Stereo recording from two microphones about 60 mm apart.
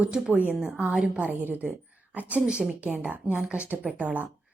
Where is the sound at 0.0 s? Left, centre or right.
Centre.